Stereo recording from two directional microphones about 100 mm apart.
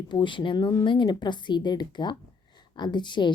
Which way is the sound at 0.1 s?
55° left (ahead or behind).